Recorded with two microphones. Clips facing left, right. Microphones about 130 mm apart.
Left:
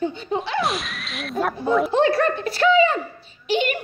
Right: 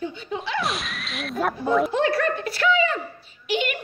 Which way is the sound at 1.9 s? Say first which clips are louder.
Left 4 dB; 25° left (ahead or behind).